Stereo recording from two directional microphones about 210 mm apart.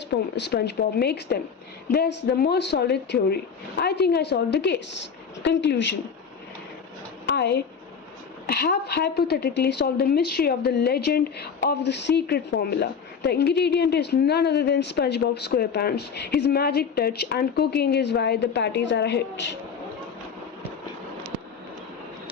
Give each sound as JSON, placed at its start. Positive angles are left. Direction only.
{"t": 0.1, "sound": "a woman's voice", "side_deg": 55}
{"t": 7.3, "sound": "a woman's voice", "side_deg": 55}